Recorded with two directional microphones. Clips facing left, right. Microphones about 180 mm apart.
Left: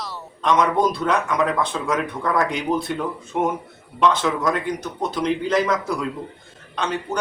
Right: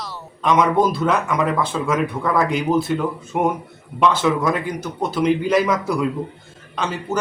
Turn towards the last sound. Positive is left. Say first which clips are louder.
# right 1 dB
turn(degrees=-5)  # may be behind; listen again after turning